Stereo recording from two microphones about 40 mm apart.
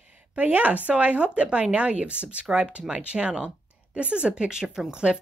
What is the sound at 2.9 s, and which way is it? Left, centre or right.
Speech, right.